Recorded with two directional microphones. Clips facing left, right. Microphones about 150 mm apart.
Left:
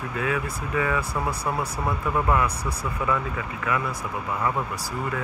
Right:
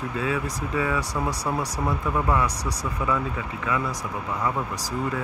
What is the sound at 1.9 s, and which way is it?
Speech, 10° left (ahead or behind).